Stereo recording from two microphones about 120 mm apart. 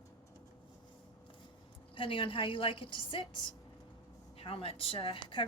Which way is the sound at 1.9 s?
45° left (ahead or behind).